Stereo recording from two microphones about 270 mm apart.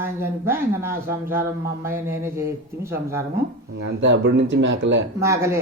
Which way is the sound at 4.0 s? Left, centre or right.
Right.